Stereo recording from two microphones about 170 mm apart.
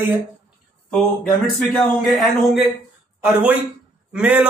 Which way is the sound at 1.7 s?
Centre (ahead or behind).